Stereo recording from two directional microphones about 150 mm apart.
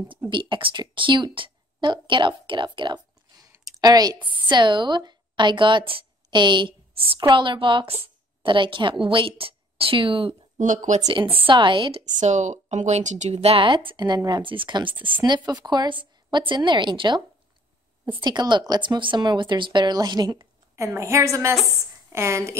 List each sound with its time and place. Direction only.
0.3 s a woman's voice: 35° right (ahead or behind)
10.6 s speech: 55° right (ahead or behind)
11.3 s a woman's voice: 35° right (ahead or behind)
12.0 s a woman's voice: 50° right (ahead or behind); by 17.2 s 30° right (ahead or behind)
18.2 s speech: 30° right (ahead or behind)